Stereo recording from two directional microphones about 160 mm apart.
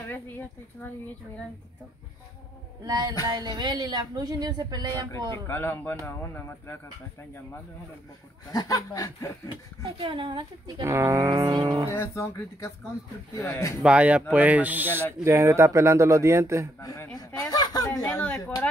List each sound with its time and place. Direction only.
0.7 s speech: 15° left (ahead or behind)
2.8 s a woman's voice: 25° right (ahead or behind)
5.5 s speech: 15° left (ahead or behind)
8.5 s speech: 20° left (ahead or behind)
9.9 s speech: 30° right (ahead or behind)
10.8 s a woman's voice: 20° right (ahead or behind)
11.9 s speech: 15° left (ahead or behind)
13.8 s a man's voice: 10° right (ahead or behind)
16.8 s speech: 20° left (ahead or behind)